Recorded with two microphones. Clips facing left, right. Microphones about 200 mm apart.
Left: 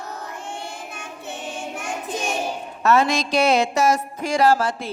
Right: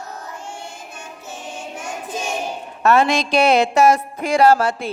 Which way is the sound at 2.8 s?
60° right (ahead or behind).